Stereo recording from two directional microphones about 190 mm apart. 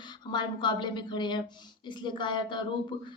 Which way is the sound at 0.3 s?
25° left (ahead or behind).